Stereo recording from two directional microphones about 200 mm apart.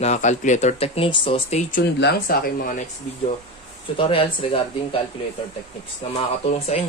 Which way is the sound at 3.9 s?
25° left (ahead or behind).